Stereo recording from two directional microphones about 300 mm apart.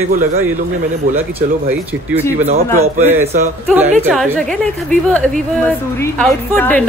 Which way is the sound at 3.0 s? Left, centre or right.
Centre.